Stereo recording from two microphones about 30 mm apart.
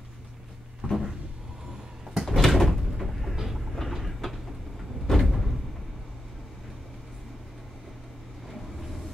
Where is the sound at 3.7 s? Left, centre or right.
Centre.